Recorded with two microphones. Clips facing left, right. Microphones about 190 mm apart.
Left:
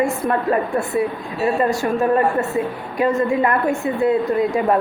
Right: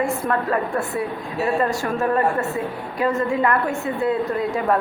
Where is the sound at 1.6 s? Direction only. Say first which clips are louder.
Left 4 dB; 15° left (ahead or behind).